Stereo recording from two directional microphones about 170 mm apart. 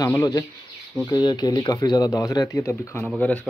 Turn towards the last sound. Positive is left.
turn(degrees=10)  # may be behind; listen again after turning